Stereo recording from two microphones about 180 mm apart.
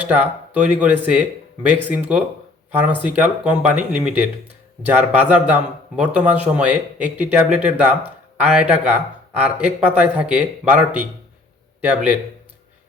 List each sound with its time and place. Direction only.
0.0 s speech: 10° right (ahead or behind)